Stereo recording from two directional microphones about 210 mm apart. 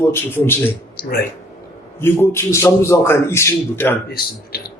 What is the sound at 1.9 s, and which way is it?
A man's voice, 10° left (ahead or behind).